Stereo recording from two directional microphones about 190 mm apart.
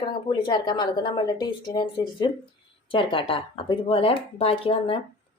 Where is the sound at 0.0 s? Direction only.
25° left (ahead or behind).